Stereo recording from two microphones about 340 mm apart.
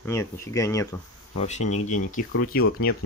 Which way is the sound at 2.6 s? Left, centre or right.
Left.